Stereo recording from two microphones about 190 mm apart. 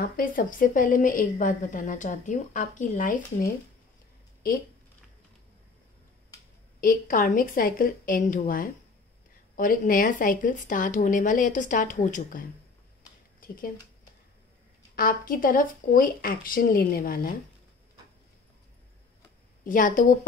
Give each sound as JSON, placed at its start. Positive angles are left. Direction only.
{"t": 0.0, "sound": "a woman's voice", "side_deg": 45}
{"t": 6.8, "sound": "a woman's voice", "side_deg": 45}
{"t": 15.0, "sound": "a woman's voice", "side_deg": 50}
{"t": 19.6, "sound": "a woman's voice", "side_deg": 45}